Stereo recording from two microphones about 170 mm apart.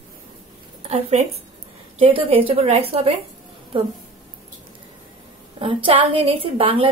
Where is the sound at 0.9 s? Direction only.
40° right (ahead or behind).